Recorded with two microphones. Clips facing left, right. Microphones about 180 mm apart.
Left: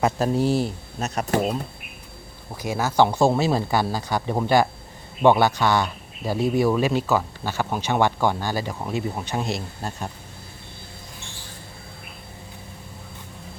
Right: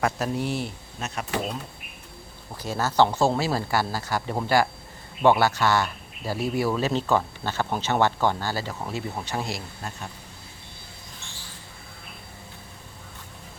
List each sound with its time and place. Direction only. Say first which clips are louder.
0.0 s speech: left 5 dB; 30° left (ahead or behind)
2.6 s speech: left 2 dB; 10° left (ahead or behind)